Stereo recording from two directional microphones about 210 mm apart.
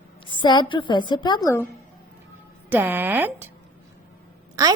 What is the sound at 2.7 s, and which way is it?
Speech, 10° right (ahead or behind).